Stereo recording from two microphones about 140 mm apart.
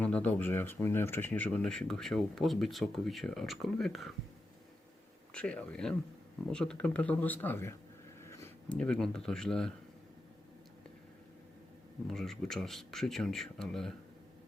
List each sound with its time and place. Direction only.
0.0 s speech: 10° left (ahead or behind)
5.3 s speech: 10° left (ahead or behind)
8.2 s a sound: 20° left (ahead or behind)
8.7 s speech: 5° left (ahead or behind)
12.0 s speech: 5° left (ahead or behind)